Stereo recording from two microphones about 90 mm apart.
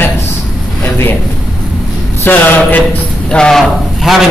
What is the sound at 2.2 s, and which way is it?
Speech, 20° left (ahead or behind).